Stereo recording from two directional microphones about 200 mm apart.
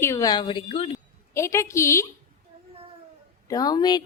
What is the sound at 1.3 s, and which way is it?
Speech, 15° left (ahead or behind).